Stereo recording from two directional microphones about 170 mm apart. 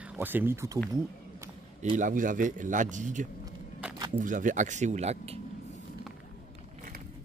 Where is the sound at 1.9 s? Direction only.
50° right (ahead or behind).